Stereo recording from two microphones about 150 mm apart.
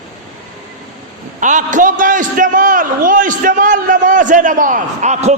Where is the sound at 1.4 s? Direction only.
55° right (ahead or behind).